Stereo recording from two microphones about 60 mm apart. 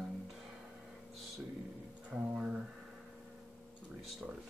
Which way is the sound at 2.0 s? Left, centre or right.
Centre.